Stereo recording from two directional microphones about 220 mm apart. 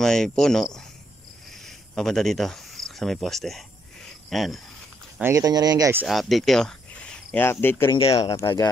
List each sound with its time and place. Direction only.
0.0 s speech: centre (ahead or behind)
5.2 s speech: 15° right (ahead or behind)
6.0 s speech: centre (ahead or behind)
8.0 s speech: 25° left (ahead or behind)
8.4 s speech: 15° left (ahead or behind)